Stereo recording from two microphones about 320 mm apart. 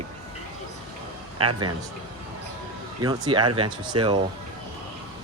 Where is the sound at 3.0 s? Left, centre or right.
Centre.